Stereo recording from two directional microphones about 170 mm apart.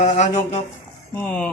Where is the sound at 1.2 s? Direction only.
5° left (ahead or behind).